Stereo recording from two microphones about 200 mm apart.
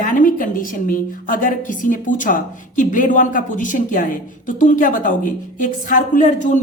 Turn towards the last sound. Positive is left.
turn(degrees=40)  # may be behind; listen again after turning